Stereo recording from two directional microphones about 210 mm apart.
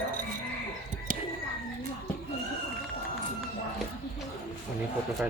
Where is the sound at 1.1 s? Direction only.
40° right (ahead or behind).